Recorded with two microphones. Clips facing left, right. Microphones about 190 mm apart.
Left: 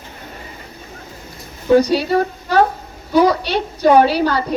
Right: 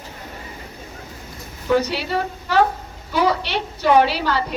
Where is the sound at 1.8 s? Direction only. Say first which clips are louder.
Left 8 dB; 15° left (ahead or behind).